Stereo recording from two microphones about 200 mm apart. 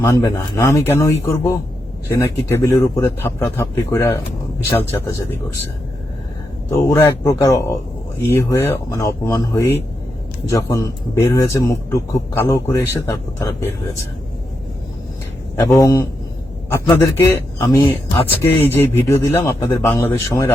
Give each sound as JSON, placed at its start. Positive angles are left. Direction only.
{"t": 0.0, "sound": "a man's voice", "side_deg": 15}
{"t": 6.7, "sound": "a man's voice", "side_deg": 15}
{"t": 15.5, "sound": "a man's voice", "side_deg": 15}